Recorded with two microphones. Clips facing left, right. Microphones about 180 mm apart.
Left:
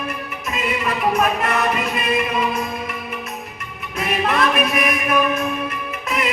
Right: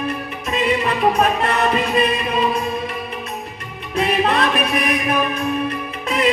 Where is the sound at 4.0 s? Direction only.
30° right (ahead or behind).